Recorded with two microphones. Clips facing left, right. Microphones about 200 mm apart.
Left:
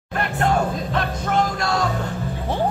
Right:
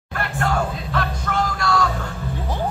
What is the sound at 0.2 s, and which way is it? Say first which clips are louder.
Music: left 2 dB; 20° left (ahead or behind).